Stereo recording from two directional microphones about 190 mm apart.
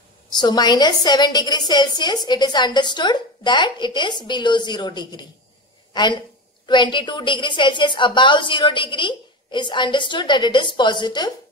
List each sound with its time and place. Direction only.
0.4 s a woman's voice: 20° left (ahead or behind)